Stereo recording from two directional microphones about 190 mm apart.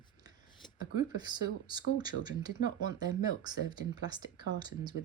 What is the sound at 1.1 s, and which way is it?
Speech, 20° right (ahead or behind).